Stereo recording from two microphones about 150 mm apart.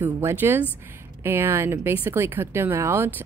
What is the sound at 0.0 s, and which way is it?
Speech, 15° right (ahead or behind).